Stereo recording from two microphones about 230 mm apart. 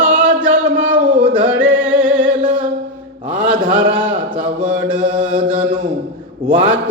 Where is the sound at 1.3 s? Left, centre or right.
Centre.